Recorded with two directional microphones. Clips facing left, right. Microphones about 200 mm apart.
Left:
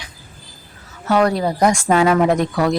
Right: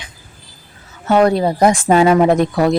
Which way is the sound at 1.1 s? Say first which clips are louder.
Right 4 dB; 25° right (ahead or behind).